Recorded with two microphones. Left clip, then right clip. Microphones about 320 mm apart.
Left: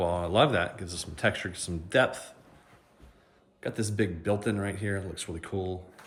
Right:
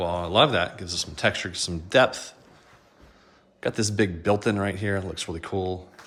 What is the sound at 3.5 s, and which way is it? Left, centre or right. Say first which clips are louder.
Speech: right 6 dB; centre.